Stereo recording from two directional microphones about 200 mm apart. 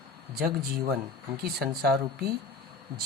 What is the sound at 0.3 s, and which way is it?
Speech, 50° right (ahead or behind).